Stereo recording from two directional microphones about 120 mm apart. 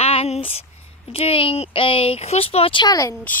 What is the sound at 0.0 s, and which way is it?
Speech, 60° left (ahead or behind).